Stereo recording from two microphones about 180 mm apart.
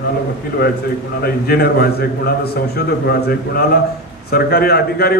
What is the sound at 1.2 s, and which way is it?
A man's voice, 60° left (ahead or behind).